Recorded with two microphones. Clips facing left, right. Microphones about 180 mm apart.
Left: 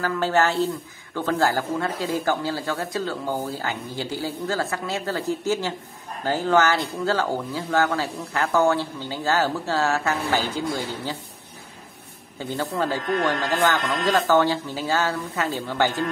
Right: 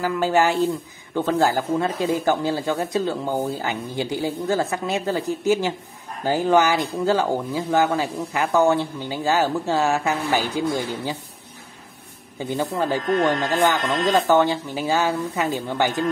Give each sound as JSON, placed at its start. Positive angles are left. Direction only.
{"t": 0.0, "sound": "speech", "side_deg": -15}
{"t": 12.4, "sound": "speech", "side_deg": -15}
{"t": 13.0, "sound": "speech", "side_deg": 0}
{"t": 14.2, "sound": "speech", "side_deg": -20}